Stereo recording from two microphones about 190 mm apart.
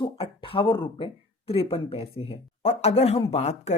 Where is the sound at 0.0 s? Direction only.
25° left (ahead or behind).